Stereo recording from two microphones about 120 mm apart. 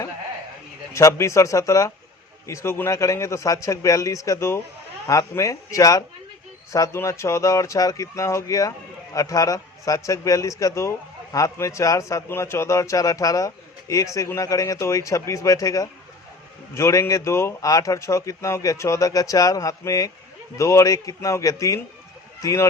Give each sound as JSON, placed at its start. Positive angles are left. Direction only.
{"t": 0.9, "sound": "a man's voice", "side_deg": 25}